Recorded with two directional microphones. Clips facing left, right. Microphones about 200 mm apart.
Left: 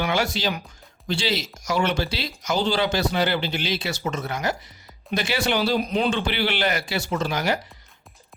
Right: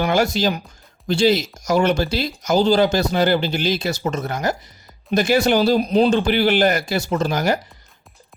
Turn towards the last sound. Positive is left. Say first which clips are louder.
# right 5 dB
turn(degrees=-45)  # may be behind; listen again after turning